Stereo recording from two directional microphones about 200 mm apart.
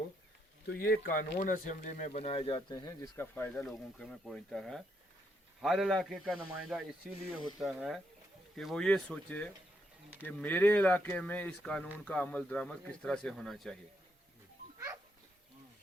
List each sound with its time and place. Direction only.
0.8 s speech: 50° left (ahead or behind); by 13.7 s centre (ahead or behind)